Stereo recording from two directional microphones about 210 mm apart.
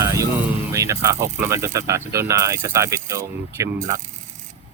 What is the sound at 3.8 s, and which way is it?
Speech, 35° right (ahead or behind).